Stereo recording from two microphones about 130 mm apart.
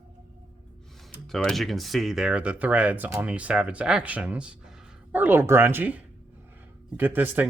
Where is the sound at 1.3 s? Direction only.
5° left (ahead or behind); by 6.0 s 15° right (ahead or behind).